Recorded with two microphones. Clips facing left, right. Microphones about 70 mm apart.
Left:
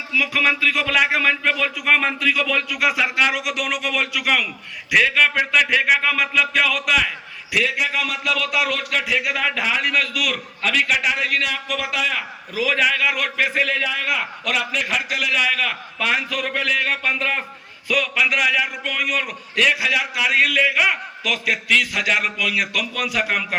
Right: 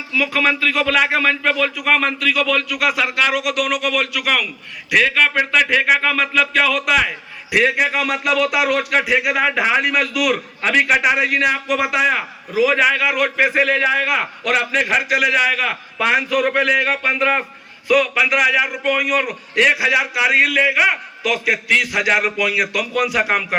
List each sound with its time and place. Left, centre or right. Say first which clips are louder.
0.1 s speech: right 2 dB; centre
1.7 s a man's voice: right 1 dB; centre
4.9 s speech: right 1 dB; centre
7.5 s a man's voice: right 5 dB; right; by 10.3 s centre
10.3 s a man's voice: right 4 dB; right; by 13.3 s centre
13.3 s speech: right 5 dB; right
15.1 s a man's voice: right 4 dB; right
17.8 s a man's voice: right 5 dB; centre